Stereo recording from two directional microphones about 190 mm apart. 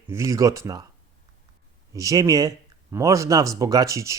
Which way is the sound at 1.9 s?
20° right (ahead or behind).